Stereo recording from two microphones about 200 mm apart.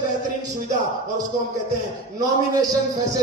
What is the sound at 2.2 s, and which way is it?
Speech, 20° right (ahead or behind).